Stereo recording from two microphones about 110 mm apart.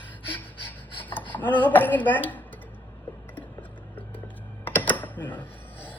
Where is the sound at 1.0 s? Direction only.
15° left (ahead or behind).